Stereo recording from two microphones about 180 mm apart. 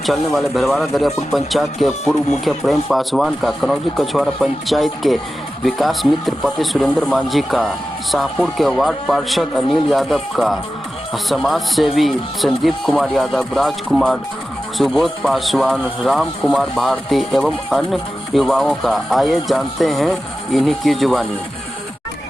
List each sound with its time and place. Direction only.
0.0 s speech: centre (ahead or behind)